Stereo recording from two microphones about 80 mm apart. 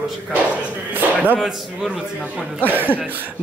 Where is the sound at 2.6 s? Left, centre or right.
Right.